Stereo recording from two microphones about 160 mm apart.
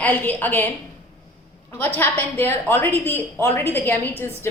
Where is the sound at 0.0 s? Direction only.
10° left (ahead or behind).